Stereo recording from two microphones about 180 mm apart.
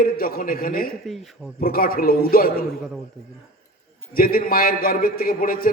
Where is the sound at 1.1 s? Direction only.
Centre (ahead or behind).